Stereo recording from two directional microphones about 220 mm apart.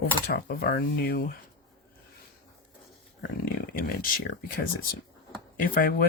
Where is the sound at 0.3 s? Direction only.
45° left (ahead or behind).